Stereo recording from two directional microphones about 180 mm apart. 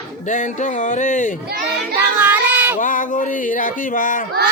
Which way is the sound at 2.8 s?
45° left (ahead or behind).